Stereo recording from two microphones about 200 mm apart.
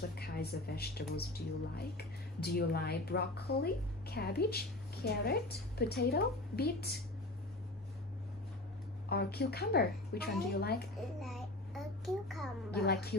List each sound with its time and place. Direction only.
0.1 s speech: 55° left (ahead or behind)
9.1 s speech: 55° left (ahead or behind)
11.1 s a sound: centre (ahead or behind)
12.7 s speech: 50° left (ahead or behind)